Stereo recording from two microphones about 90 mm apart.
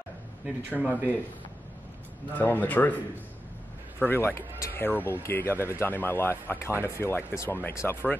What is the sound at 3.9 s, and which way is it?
A man's voice, 25° left (ahead or behind).